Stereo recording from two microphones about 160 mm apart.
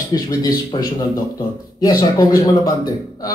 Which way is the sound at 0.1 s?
25° left (ahead or behind).